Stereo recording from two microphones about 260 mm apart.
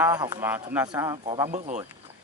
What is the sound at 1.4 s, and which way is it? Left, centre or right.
Speech, right.